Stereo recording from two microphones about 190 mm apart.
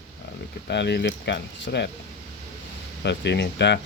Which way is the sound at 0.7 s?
65° left (ahead or behind).